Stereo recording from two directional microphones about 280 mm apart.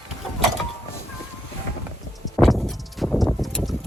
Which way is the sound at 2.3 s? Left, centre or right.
Centre.